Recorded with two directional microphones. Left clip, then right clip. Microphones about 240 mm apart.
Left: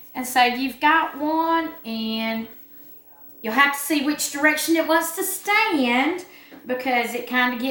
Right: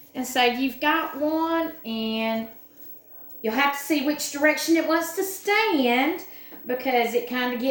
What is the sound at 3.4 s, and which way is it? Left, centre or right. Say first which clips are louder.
A woman's voice: left 4 dB; centre.